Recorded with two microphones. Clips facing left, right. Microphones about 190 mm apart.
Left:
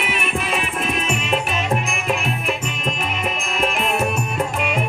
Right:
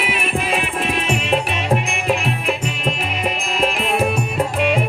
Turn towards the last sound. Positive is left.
turn(degrees=-35)  # may be behind; listen again after turning